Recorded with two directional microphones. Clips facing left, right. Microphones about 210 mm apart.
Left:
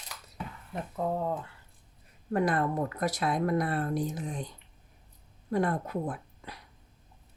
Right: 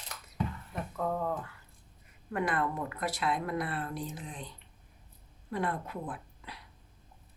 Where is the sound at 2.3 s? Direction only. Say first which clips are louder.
Left 4 dB; 40° left (ahead or behind).